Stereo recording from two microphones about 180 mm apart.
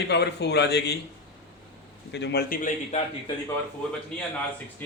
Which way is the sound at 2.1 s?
70° left (ahead or behind).